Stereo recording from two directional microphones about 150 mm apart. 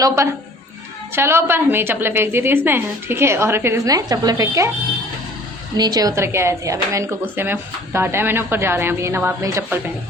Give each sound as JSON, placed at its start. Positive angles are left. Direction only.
{"t": 0.0, "sound": "a woman's voice", "side_deg": -20}
{"t": 5.7, "sound": "a woman's voice", "side_deg": -25}